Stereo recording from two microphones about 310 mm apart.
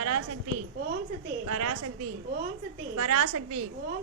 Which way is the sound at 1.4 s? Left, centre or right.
Right.